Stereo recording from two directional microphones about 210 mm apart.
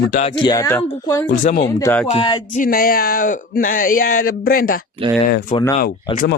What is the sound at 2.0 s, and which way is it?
Speech, 25° left (ahead or behind).